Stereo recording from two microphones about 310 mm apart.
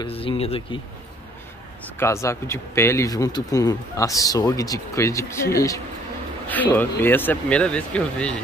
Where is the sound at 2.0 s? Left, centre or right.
Centre.